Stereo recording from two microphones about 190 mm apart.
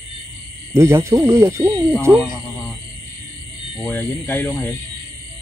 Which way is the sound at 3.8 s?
10° left (ahead or behind).